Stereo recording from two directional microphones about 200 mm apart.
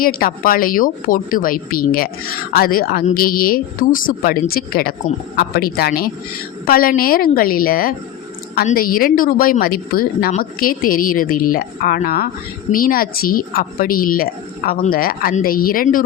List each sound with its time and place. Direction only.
0.0 s a woman's voice: 45° left (ahead or behind)